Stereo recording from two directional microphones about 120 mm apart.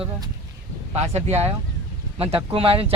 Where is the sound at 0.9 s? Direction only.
60° right (ahead or behind).